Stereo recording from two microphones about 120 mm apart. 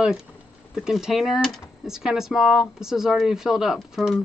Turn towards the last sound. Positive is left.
turn(degrees=0)  # may be behind; listen again after turning